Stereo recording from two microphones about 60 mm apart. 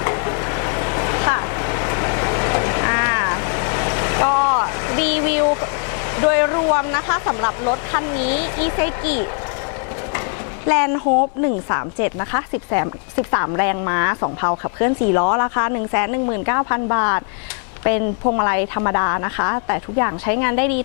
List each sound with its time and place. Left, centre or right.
0.0 s vehicle: left
6.1 s speech: left
10.7 s a woman's voice: left